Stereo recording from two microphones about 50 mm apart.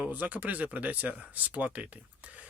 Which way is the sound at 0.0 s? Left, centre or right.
Right.